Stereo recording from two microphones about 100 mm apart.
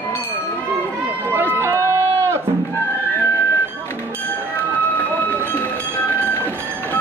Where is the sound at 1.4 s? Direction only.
25° right (ahead or behind).